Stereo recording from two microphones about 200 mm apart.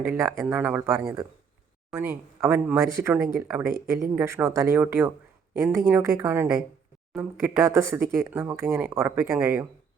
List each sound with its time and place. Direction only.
0.0 s speech: 10° right (ahead or behind)